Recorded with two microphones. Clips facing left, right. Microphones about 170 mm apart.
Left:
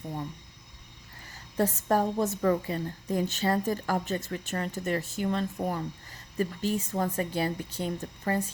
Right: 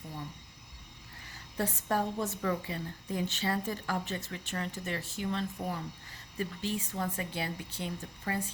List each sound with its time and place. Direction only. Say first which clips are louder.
1.5 s a woman's voice: left 6 dB; 40° left (ahead or behind)